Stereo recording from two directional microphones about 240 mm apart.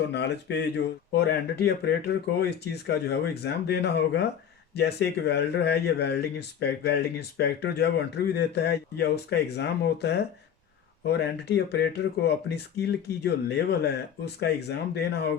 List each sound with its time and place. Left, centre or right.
0.1 s speech: left